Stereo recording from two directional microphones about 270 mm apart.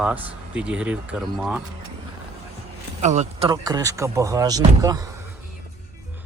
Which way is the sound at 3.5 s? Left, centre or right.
Centre.